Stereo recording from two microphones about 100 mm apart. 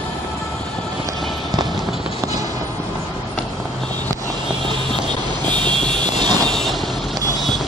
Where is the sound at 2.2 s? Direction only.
35° right (ahead or behind).